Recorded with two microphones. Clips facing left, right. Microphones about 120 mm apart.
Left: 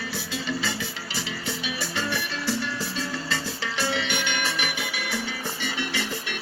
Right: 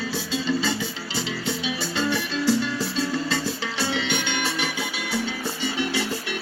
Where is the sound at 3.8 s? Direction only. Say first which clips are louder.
Right 2 dB; 20° right (ahead or behind).